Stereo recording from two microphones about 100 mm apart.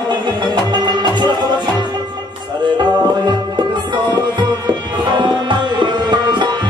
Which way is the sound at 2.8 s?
50° right (ahead or behind).